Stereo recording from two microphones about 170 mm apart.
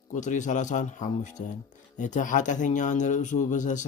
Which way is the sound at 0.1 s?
45° left (ahead or behind).